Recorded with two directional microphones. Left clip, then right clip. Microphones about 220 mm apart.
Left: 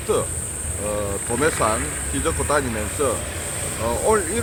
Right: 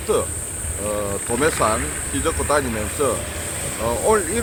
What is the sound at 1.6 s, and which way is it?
Speech, 5° right (ahead or behind).